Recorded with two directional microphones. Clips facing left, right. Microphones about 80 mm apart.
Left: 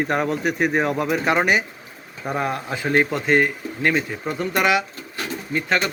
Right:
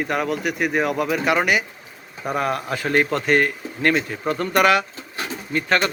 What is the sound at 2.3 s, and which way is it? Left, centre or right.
A man's voice, left.